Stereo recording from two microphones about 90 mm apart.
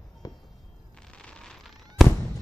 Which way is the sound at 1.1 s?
10° left (ahead or behind).